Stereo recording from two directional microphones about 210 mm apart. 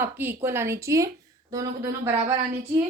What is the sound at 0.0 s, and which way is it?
A woman's voice, 10° right (ahead or behind).